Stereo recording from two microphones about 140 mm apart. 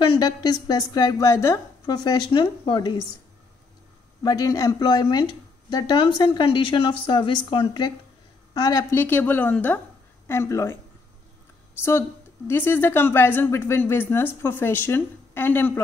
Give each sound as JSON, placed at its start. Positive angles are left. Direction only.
{"t": 0.1, "sound": "a woman's voice", "side_deg": 30}
{"t": 4.2, "sound": "a woman's voice", "side_deg": 25}
{"t": 8.9, "sound": "speech", "side_deg": 15}
{"t": 12.4, "sound": "speech", "side_deg": 15}